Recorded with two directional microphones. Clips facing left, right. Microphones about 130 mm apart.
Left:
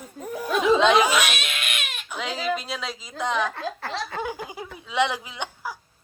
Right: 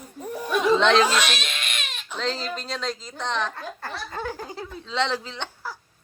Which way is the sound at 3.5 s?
70° left (ahead or behind).